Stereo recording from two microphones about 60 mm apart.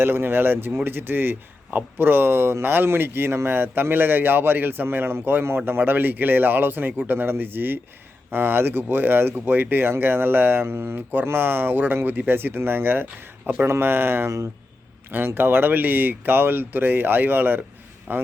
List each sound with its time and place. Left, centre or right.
0.0 s a man's voice: right
15.4 s a man's voice: right